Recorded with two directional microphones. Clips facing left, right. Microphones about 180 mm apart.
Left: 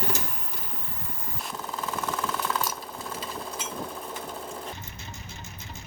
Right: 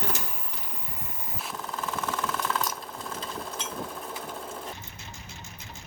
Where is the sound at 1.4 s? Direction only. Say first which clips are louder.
Left 1 dB; centre (ahead or behind).